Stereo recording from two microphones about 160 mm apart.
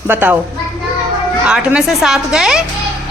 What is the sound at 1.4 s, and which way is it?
A woman's voice, 5° right (ahead or behind).